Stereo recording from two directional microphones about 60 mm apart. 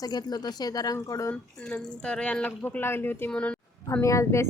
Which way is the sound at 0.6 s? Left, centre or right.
Left.